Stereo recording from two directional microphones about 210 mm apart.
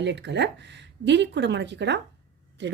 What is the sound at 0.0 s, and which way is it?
A woman's voice, 55° right (ahead or behind).